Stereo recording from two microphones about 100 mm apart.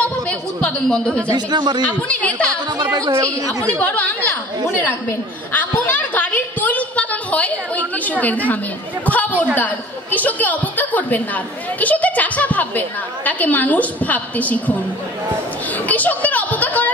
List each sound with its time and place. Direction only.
0.0 s a woman's voice: 15° left (ahead or behind)
1.3 s speech: 45° right (ahead or behind)
2.0 s a woman's voice: 15° left (ahead or behind)
2.9 s a woman's voice: 35° right (ahead or behind)
3.8 s a woman's voice: 15° left (ahead or behind)
5.5 s a sound: 15° left (ahead or behind)
9.0 s a woman's voice: 15° left (ahead or behind)
15.9 s a sound: 15° left (ahead or behind)